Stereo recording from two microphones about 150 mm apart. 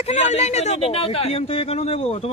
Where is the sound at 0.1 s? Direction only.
50° left (ahead or behind).